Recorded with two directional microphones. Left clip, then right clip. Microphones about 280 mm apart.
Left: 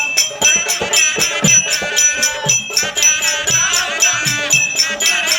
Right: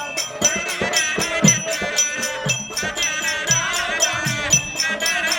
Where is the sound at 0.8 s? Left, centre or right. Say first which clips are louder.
Left 4 dB; centre.